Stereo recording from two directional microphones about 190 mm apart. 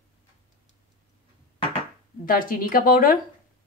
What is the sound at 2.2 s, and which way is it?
Speech, 50° left (ahead or behind).